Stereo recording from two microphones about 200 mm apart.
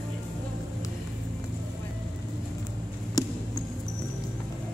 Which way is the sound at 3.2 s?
20° left (ahead or behind).